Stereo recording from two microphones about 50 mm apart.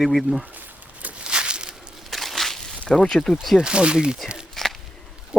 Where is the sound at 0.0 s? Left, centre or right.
Centre.